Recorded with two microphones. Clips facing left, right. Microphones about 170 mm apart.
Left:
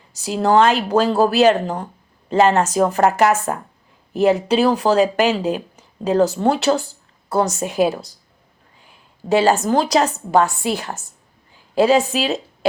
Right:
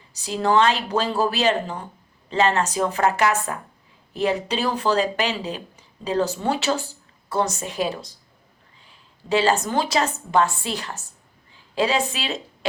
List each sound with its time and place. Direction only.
0.3 s speech: 50° left (ahead or behind)
9.3 s a woman's voice: 45° left (ahead or behind)
11.7 s speech: 45° left (ahead or behind)